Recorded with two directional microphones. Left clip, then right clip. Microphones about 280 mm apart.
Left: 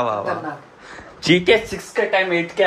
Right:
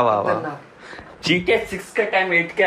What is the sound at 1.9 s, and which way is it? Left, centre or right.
Speech, centre.